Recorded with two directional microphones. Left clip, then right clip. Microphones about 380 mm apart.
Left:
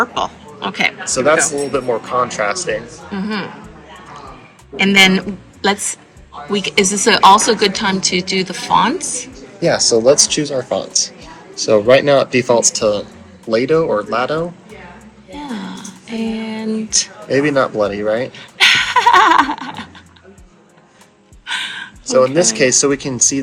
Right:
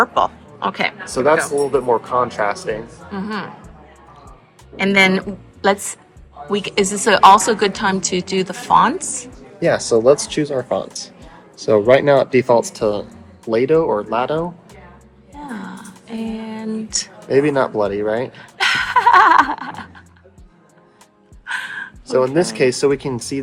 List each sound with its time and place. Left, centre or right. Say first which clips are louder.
0.0 s speech: right 2 dB; centre
2.2 s speech: left 2 dB; centre
3.1 s a woman's voice: left 3 dB; centre
4.8 s a woman's voice: left 3 dB; centre
9.6 s speech: left 2 dB; right
15.3 s a sound: left 4 dB; centre
17.4 s speech: left 2 dB; centre
18.5 s dog: left 4 dB; centre
21.4 s gasp: left 3 dB; centre
22.0 s speech: left 4 dB; centre